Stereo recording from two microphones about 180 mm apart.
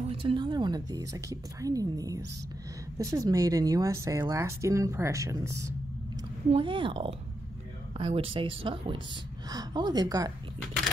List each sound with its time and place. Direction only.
0.0 s a woman's voice: 30° right (ahead or behind)
6.5 s speech: 30° right (ahead or behind)